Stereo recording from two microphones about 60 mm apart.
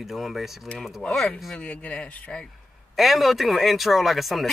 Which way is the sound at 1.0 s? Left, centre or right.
Centre.